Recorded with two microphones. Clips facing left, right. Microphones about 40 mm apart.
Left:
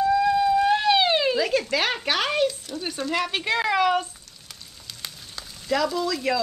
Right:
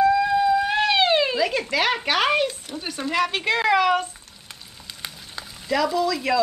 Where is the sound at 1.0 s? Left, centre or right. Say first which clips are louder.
Right 2 dB; centre.